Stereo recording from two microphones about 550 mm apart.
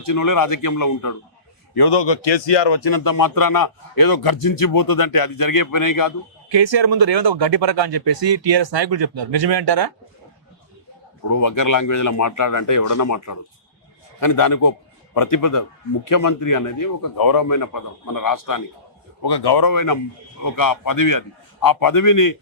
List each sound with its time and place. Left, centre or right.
0.0 s speech: left
1.7 s speech: left
6.5 s speech: right
11.3 s a man's voice: left